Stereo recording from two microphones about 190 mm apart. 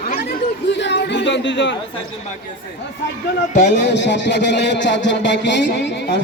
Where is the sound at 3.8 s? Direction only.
65° left (ahead or behind).